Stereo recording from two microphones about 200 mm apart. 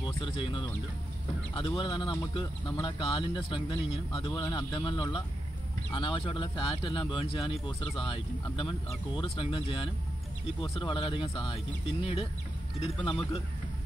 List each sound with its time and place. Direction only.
0.0 s speech: 25° left (ahead or behind)